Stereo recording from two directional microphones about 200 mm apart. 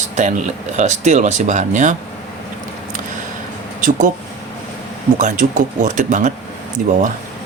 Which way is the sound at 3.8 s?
40° right (ahead or behind).